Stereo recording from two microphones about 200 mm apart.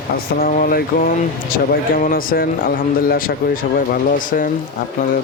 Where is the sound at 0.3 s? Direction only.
45° left (ahead or behind).